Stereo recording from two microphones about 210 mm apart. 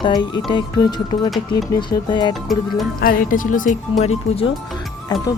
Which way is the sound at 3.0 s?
45° left (ahead or behind).